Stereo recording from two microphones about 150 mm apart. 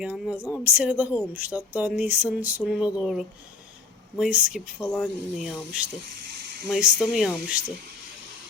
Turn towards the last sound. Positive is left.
turn(degrees=-5)  # may be behind; listen again after turning